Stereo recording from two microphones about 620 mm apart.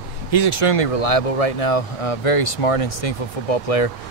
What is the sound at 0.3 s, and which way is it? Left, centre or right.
Speech, left.